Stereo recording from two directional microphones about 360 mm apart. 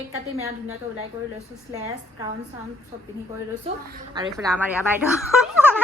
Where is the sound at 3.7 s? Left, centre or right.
Centre.